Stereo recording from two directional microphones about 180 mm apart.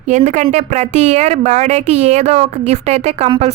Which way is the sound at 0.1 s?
40° right (ahead or behind).